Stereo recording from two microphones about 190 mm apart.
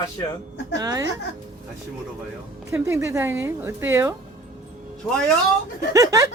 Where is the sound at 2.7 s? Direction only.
15° right (ahead or behind).